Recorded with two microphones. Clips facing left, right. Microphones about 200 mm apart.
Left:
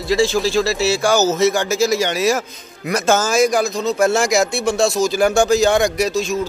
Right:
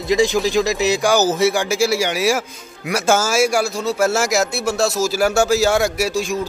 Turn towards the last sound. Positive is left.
turn(degrees=-10)  # may be behind; listen again after turning